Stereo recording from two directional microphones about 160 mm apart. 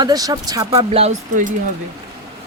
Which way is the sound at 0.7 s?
35° right (ahead or behind).